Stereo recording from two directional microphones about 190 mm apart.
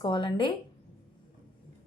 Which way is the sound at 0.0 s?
25° left (ahead or behind).